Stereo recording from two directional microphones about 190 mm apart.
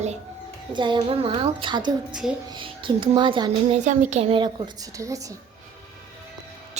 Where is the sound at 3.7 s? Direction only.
40° right (ahead or behind); by 5.4 s 15° right (ahead or behind).